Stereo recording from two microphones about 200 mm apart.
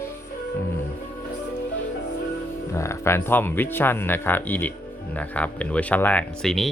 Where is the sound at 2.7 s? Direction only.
15° left (ahead or behind).